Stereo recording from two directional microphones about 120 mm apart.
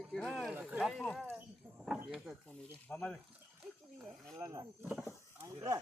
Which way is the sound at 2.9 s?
10° left (ahead or behind).